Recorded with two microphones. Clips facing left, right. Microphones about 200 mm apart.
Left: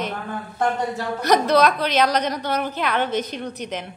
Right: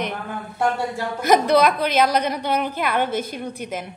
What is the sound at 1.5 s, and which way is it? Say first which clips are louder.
A woman's voice: right 1 dB; 10° right (ahead or behind).